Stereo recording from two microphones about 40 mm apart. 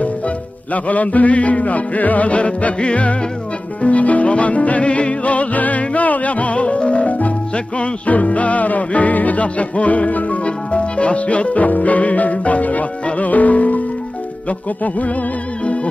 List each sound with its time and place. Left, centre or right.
0.8 s music: left
15.6 s music: left